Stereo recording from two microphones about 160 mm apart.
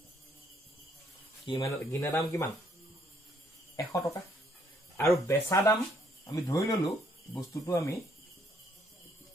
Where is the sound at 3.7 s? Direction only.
20° left (ahead or behind).